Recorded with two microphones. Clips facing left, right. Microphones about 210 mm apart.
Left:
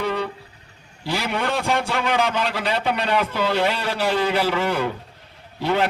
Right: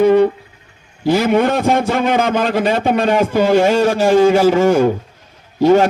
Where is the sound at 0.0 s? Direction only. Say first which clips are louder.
Right 14 dB; 50° right (ahead or behind).